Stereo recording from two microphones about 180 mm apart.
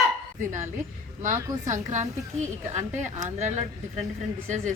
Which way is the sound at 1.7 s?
40° right (ahead or behind).